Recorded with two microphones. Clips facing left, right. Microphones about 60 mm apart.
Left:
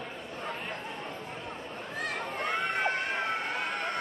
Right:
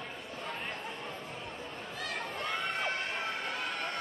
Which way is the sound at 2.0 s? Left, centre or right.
Left.